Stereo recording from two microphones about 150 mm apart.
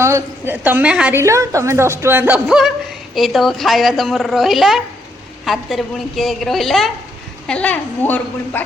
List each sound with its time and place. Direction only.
0.0 s a woman's voice: 15° right (ahead or behind)
1.2 s a woman's voice: 20° right (ahead or behind); by 8.6 s 10° left (ahead or behind)